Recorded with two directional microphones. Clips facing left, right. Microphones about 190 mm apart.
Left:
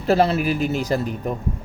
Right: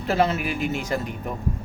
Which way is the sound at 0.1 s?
35° left (ahead or behind).